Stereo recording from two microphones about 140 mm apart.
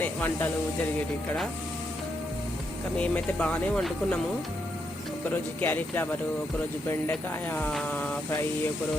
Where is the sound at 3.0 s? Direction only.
10° left (ahead or behind).